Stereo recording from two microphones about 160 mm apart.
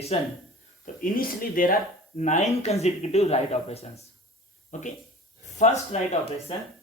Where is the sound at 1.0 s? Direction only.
60° left (ahead or behind); by 6.0 s 45° left (ahead or behind).